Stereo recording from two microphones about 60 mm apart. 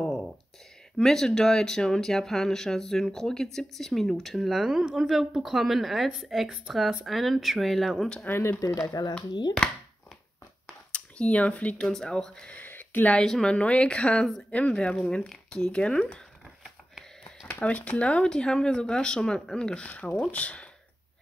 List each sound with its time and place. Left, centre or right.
0.0 s a sound: centre
1.0 s speech: centre
8.3 s speech: left
8.5 s speech: left
10.9 s speech: left
11.9 s speech: centre
12.4 s a sound: left
13.1 s a woman's voice: centre
17.5 s speech: left